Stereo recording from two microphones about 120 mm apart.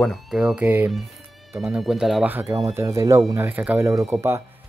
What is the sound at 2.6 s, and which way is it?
Speech, 25° right (ahead or behind).